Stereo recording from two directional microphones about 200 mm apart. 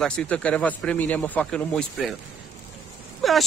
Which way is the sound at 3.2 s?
Centre (ahead or behind).